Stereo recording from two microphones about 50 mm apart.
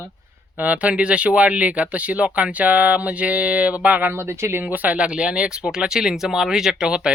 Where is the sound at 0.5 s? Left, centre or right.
Right.